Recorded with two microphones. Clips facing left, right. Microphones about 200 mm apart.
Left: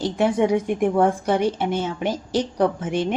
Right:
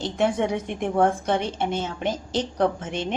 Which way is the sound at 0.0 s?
10° left (ahead or behind).